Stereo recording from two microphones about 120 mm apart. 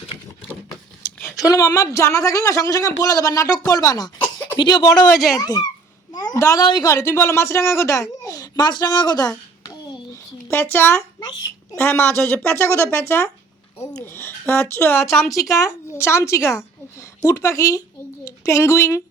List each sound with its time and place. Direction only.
1.5 s speech: 30° left (ahead or behind)
4.9 s speech: centre (ahead or behind)
5.4 s speech: 30° left (ahead or behind)
6.1 s a sound: 30° left (ahead or behind)
6.8 s speech: 25° left (ahead or behind)
10.5 s a woman's voice: 20° left (ahead or behind)